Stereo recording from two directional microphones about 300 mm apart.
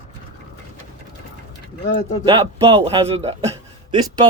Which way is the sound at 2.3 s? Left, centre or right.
Centre.